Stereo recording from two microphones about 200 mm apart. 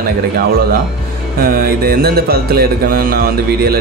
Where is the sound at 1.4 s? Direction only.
45° right (ahead or behind).